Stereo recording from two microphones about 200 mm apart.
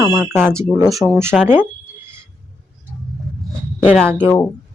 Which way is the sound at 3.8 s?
Centre (ahead or behind).